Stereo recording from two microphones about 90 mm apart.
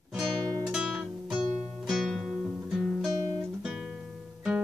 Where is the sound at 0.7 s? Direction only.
Centre (ahead or behind).